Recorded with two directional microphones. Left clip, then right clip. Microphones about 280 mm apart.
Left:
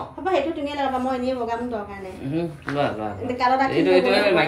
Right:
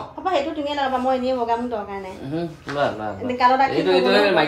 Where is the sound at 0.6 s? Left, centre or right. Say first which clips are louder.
Right 3 dB; right.